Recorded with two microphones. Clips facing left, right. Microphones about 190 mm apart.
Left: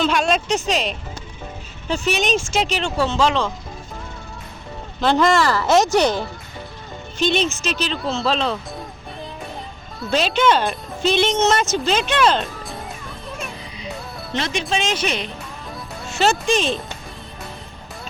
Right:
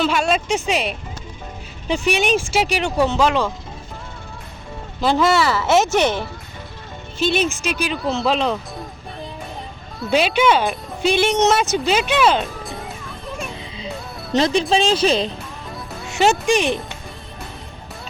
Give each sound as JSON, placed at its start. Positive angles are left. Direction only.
{"t": 0.0, "sound": "speech", "side_deg": -5}
{"t": 4.9, "sound": "speech", "side_deg": -5}
{"t": 10.1, "sound": "speech", "side_deg": -10}
{"t": 14.3, "sound": "speech", "side_deg": -35}
{"t": 16.1, "sound": "speech", "side_deg": -15}